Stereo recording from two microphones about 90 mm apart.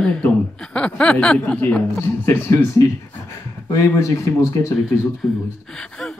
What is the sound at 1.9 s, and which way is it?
Speech, 30° left (ahead or behind).